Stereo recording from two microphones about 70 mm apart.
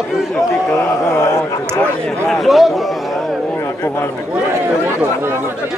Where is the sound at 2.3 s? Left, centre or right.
Centre.